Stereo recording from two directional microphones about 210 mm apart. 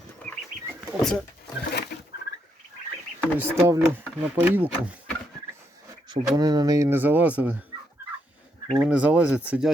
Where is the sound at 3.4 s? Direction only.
10° right (ahead or behind).